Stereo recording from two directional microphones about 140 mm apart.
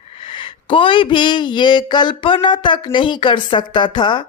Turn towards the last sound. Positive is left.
turn(degrees=35)  # may be behind; listen again after turning